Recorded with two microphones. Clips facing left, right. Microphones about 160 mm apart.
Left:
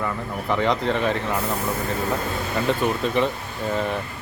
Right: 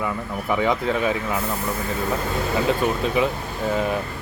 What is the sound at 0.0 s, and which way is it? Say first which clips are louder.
Speech: right 1 dB; 10° right (ahead or behind).